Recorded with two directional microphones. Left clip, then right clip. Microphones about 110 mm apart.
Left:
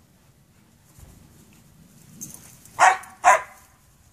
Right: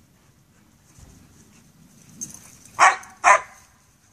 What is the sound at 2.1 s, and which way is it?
Dog, centre (ahead or behind).